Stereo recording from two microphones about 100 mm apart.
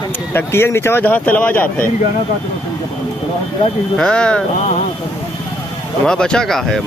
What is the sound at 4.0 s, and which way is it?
Speech, 10° left (ahead or behind).